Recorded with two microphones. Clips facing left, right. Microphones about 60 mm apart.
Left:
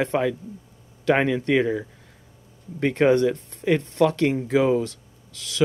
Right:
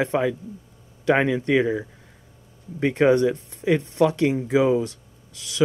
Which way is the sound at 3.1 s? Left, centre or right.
Right.